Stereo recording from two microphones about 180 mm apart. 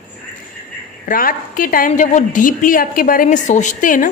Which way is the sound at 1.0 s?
50° left (ahead or behind).